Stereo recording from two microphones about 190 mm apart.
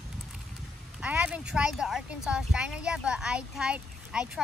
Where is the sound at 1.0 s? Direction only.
5° right (ahead or behind).